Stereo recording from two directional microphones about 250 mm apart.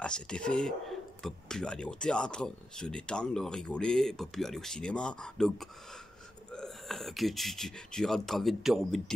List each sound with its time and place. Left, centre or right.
0.0 s speech: centre